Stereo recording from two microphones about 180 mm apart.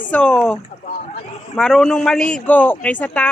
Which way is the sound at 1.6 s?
Centre (ahead or behind).